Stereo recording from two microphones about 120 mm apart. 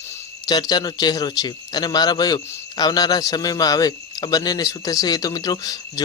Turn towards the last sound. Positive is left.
turn(degrees=35)  # may be behind; listen again after turning